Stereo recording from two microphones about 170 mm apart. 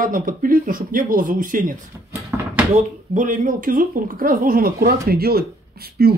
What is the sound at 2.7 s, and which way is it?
Speech, 50° right (ahead or behind).